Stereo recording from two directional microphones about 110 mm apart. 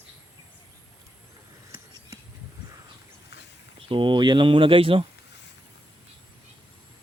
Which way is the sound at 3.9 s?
50° right (ahead or behind).